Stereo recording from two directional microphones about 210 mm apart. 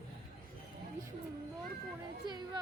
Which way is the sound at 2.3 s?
20° right (ahead or behind).